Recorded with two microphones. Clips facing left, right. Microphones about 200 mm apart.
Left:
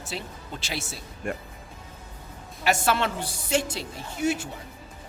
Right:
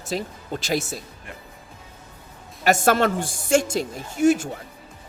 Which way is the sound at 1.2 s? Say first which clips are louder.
Left 10 dB; 45° left (ahead or behind).